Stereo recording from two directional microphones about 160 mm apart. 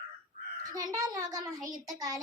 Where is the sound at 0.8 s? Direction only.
20° right (ahead or behind).